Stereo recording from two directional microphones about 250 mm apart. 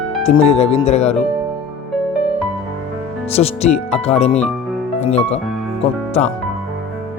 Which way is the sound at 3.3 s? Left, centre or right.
Left.